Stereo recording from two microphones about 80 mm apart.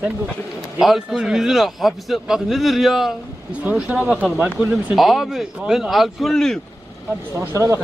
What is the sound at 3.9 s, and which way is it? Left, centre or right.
A man's voice, centre.